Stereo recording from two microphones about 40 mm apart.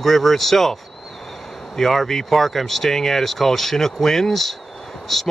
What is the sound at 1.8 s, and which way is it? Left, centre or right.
Speech, centre.